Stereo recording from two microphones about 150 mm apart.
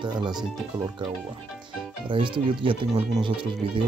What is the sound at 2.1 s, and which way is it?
Speech, 35° right (ahead or behind).